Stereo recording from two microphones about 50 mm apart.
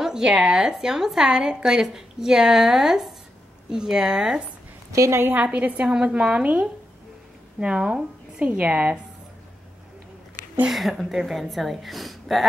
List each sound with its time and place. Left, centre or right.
0.0 s a woman's voice: centre
4.9 s a woman's voice: right
5.3 s a woman's voice: right
8.5 s a woman's voice: right
10.7 s a woman's voice: centre